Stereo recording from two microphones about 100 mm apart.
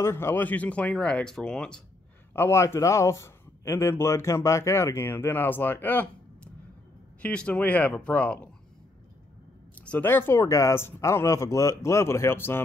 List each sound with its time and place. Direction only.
0.0 s speech: 25° left (ahead or behind); by 1.8 s 10° left (ahead or behind)
2.3 s a man's voice: 25° left (ahead or behind)
9.8 s a man's voice: 15° left (ahead or behind)